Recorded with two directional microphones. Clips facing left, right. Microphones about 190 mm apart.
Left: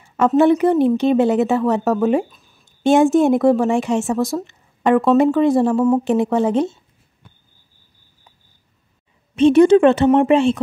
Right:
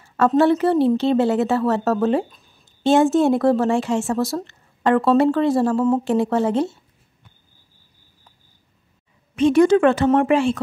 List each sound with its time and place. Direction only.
0.4 s a woman's voice: 15° left (ahead or behind)
9.3 s a woman's voice: 25° left (ahead or behind)